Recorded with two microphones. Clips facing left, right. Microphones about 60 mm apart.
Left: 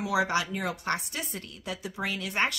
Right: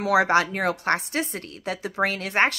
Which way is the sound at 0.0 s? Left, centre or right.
Right.